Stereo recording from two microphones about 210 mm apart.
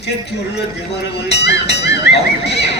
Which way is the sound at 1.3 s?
55° left (ahead or behind).